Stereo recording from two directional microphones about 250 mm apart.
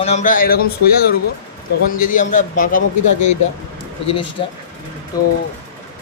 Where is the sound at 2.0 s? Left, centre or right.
Left.